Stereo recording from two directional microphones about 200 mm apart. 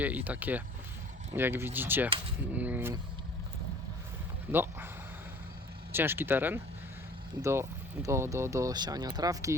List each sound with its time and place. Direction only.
0.0 s speech: 10° right (ahead or behind)
4.5 s speech: 10° right (ahead or behind)
5.9 s speech: 10° right (ahead or behind)